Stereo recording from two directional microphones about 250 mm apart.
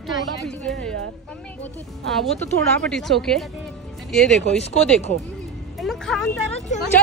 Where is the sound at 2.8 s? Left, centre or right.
Centre.